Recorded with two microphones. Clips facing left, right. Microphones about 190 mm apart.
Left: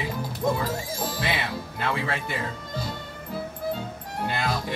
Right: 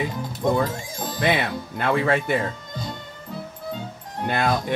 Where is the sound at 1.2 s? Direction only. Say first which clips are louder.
Right 6 dB; 50° right (ahead or behind).